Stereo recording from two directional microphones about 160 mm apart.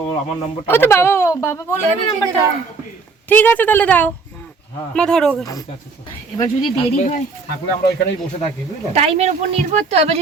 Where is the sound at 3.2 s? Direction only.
10° left (ahead or behind).